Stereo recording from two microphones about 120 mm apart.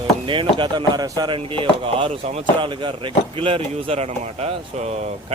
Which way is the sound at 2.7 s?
45° right (ahead or behind).